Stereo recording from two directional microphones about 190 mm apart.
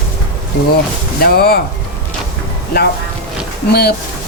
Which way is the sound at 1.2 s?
55° left (ahead or behind).